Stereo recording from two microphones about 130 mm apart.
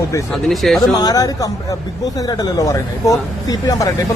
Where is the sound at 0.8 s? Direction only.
30° left (ahead or behind).